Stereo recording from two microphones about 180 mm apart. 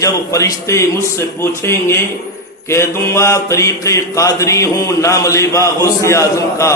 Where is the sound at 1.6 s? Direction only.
15° left (ahead or behind).